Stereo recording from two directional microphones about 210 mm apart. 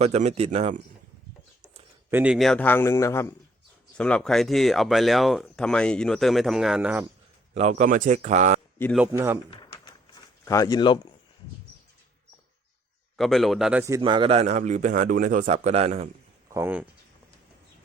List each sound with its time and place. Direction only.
0.0 s speech: 30° right (ahead or behind)
2.0 s a man's voice: 10° right (ahead or behind)
7.5 s speech: 30° right (ahead or behind)
9.0 s speech: 10° right (ahead or behind)
9.5 s typewriter: 20° left (ahead or behind)
10.4 s a man's voice: 15° left (ahead or behind)
13.1 s a man's voice: centre (ahead or behind); by 16.0 s 30° right (ahead or behind)
16.5 s speech: 10° right (ahead or behind)